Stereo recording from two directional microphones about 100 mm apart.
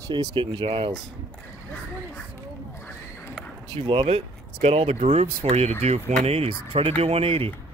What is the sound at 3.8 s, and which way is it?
Speech, 65° right (ahead or behind).